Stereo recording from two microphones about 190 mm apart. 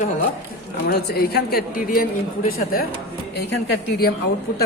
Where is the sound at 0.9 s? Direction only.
55° left (ahead or behind).